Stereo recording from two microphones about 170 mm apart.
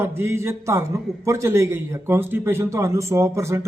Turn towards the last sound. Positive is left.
turn(degrees=-15)  # may be behind; listen again after turning